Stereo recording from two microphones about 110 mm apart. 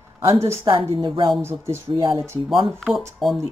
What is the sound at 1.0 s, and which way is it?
Speech, 50° right (ahead or behind).